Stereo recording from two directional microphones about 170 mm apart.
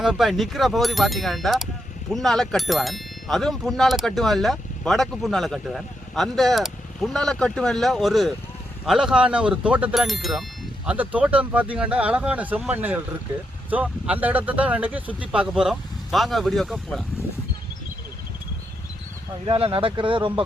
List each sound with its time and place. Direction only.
0.0 s speech: centre (ahead or behind)
19.5 s speech: 35° right (ahead or behind)